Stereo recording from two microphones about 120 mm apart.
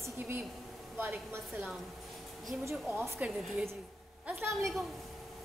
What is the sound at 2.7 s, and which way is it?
Speech, 20° right (ahead or behind).